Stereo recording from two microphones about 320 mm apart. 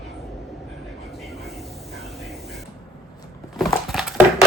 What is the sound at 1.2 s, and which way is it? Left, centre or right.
Train, centre.